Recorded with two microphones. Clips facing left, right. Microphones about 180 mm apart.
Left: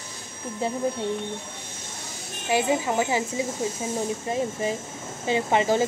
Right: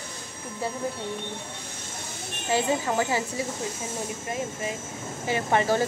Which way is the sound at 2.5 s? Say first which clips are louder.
Left 2 dB; 15° left (ahead or behind).